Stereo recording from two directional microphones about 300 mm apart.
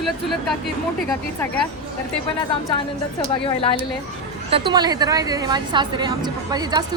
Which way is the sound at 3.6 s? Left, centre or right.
Centre.